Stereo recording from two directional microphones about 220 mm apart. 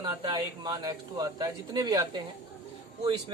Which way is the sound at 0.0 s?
20° right (ahead or behind).